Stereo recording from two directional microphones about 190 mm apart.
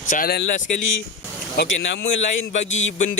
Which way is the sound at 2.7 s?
90° left.